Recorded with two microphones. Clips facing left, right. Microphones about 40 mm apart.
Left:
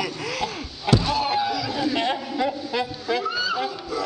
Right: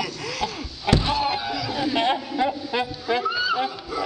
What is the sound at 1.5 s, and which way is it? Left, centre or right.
A man's voice, centre.